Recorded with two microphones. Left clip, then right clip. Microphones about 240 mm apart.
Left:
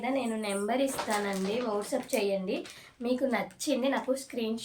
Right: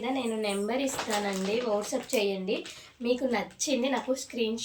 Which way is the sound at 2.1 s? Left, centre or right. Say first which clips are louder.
Right 2 dB; centre.